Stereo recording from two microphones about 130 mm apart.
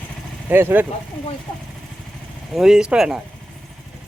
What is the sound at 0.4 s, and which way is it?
Speech, 15° right (ahead or behind).